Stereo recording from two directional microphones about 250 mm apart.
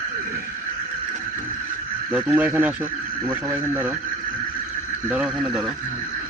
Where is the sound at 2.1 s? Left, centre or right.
Centre.